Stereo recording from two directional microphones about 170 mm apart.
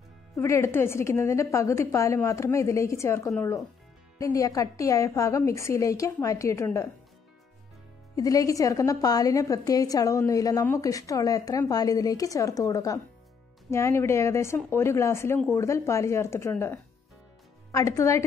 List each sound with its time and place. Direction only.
0.4 s a woman's voice: 15° left (ahead or behind)
8.2 s a woman's voice: 20° left (ahead or behind)